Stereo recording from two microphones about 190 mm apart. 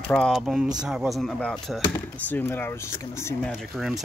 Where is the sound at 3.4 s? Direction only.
Centre (ahead or behind).